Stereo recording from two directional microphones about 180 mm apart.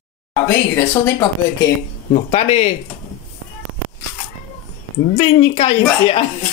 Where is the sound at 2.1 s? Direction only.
40° left (ahead or behind).